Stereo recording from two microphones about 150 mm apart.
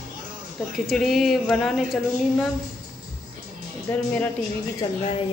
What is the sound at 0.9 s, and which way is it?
A woman's voice, centre (ahead or behind).